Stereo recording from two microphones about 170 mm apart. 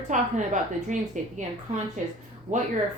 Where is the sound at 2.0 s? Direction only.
45° right (ahead or behind).